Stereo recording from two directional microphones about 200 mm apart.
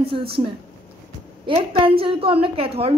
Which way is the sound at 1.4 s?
25° right (ahead or behind).